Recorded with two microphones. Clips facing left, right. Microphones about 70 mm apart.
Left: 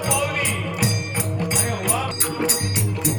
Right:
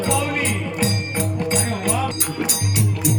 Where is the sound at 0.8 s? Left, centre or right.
Centre.